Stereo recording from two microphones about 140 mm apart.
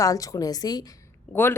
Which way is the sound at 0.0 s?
25° left (ahead or behind).